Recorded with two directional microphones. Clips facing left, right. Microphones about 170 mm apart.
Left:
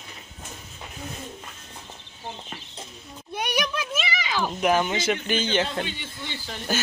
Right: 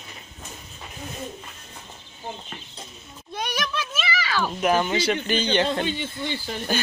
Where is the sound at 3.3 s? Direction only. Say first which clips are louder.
Left 1 dB; 10° left (ahead or behind).